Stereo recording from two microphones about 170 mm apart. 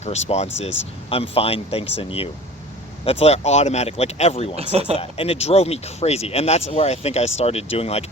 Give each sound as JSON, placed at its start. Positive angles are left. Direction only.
{"t": 0.0, "sound": "speech", "side_deg": 40}
{"t": 4.5, "sound": "speech", "side_deg": -35}
{"t": 4.9, "sound": "speech", "side_deg": 35}